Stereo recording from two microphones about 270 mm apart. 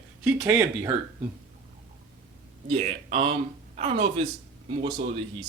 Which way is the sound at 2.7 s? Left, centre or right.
Right.